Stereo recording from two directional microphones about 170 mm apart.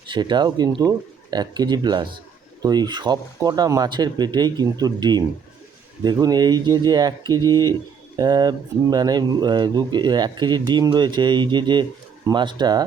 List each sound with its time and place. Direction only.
0.1 s speech: 25° right (ahead or behind)